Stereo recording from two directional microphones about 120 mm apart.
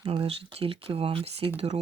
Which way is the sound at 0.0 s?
45° right (ahead or behind).